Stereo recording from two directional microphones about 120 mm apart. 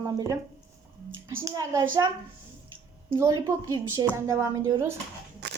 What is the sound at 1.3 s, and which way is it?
Speech, 20° right (ahead or behind).